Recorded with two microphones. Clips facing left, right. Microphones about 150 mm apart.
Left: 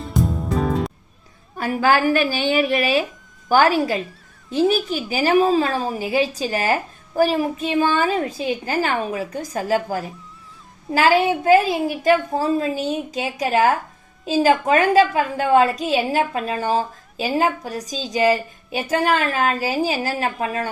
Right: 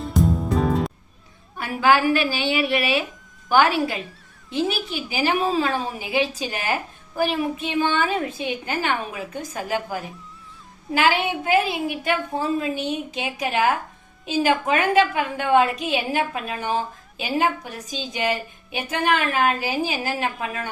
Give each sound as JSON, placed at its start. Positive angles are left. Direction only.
{"t": 0.0, "sound": "music", "side_deg": 0}
{"t": 1.5, "sound": "a woman's voice", "side_deg": 40}